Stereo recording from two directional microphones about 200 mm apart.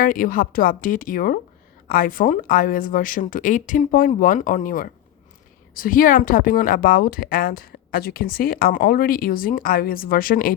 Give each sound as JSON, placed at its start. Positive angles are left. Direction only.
{"t": 0.0, "sound": "a woman's voice", "side_deg": 45}